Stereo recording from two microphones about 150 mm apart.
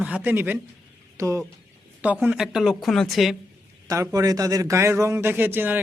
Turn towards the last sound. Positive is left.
turn(degrees=-15)  # may be behind; listen again after turning